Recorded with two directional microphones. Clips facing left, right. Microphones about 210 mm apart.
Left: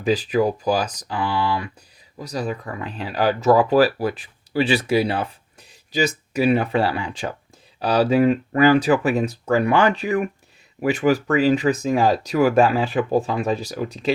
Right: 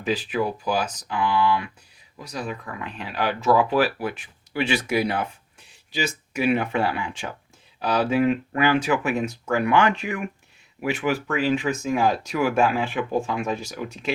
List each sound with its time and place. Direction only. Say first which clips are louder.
0.0 s speech: left 5 dB; 40° left (ahead or behind)